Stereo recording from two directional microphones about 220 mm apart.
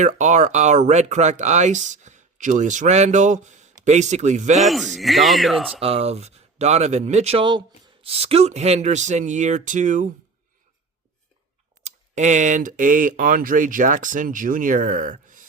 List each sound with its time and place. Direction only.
0.0 s speech: 35° right (ahead or behind)
4.6 s speech: centre (ahead or behind)
5.8 s speech: 25° right (ahead or behind)
11.8 s speech: 30° right (ahead or behind)